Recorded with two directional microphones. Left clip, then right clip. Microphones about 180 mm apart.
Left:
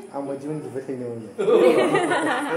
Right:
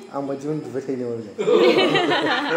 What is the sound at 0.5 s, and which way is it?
Speech, 50° right (ahead or behind).